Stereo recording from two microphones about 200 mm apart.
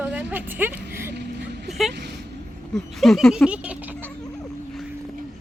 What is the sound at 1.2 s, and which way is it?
Vehicle, 55° right (ahead or behind).